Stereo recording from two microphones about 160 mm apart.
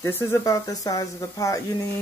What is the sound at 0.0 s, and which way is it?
Speech, 15° left (ahead or behind).